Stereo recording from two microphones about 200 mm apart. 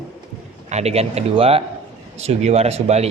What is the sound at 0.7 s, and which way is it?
A man's voice, 30° right (ahead or behind).